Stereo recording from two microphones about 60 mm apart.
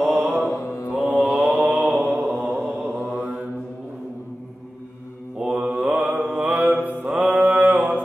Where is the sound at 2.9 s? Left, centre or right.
Right.